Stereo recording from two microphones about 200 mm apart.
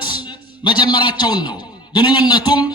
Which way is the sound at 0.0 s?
20° left (ahead or behind).